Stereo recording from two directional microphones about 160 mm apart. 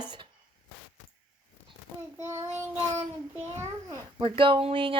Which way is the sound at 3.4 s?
15° right (ahead or behind).